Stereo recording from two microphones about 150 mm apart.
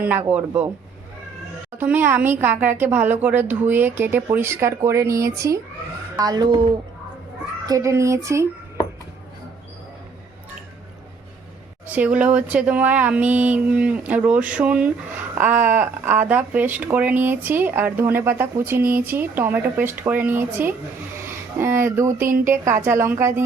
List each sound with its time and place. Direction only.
0.0 s speech: 10° right (ahead or behind)
1.8 s speech: 15° right (ahead or behind); by 6.7 s 30° right (ahead or behind)
7.7 s speech: 20° right (ahead or behind)
11.9 s speech: 10° right (ahead or behind)